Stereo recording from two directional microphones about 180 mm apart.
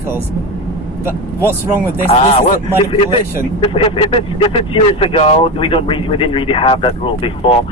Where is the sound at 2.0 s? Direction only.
30° left (ahead or behind).